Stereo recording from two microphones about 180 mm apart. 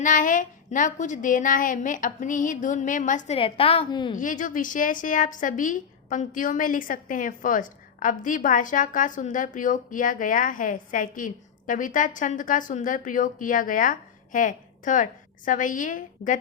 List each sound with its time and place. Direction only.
0.0 s a woman's voice: 45° left (ahead or behind)
3.3 s a woman's voice: 30° left (ahead or behind)
4.2 s a woman's voice: 45° left (ahead or behind)